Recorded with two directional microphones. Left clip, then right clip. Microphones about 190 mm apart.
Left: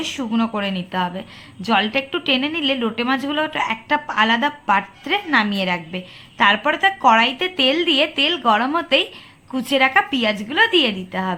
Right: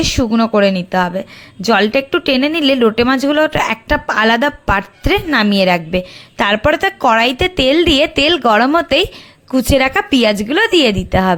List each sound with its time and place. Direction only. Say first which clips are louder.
0.0 s a woman's voice: right 8 dB; 40° right (ahead or behind)